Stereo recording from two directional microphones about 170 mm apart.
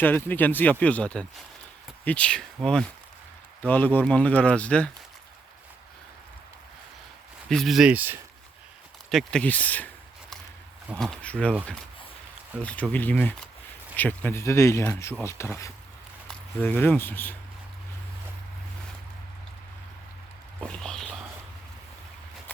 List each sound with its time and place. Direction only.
0.0 s speech: 10° left (ahead or behind)
7.5 s speech: centre (ahead or behind)
9.0 s a sound: 5° left (ahead or behind)
10.9 s speech: 5° left (ahead or behind)
12.6 s speech: 10° left (ahead or behind)
16.6 s speech: 10° left (ahead or behind)
20.6 s a sound: 5° left (ahead or behind)